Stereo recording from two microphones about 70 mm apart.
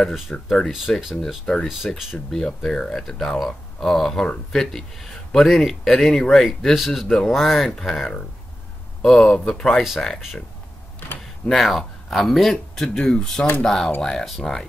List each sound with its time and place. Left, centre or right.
0.1 s speech: centre
11.4 s speech: centre